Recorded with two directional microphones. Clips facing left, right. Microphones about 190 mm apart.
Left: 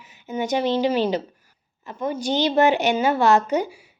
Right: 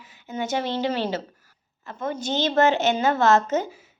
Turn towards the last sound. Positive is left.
turn(degrees=15)  # may be behind; listen again after turning